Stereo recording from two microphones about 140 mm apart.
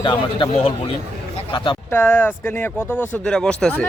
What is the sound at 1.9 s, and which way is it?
Speech, 15° left (ahead or behind).